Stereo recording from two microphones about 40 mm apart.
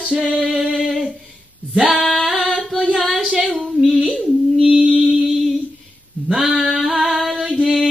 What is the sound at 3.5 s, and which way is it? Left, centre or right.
Singing, centre.